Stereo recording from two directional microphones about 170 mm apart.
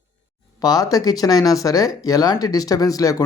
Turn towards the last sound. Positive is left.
turn(degrees=20)  # may be behind; listen again after turning